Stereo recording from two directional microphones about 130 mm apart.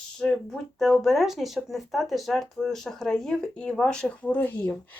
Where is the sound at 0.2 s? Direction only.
10° left (ahead or behind).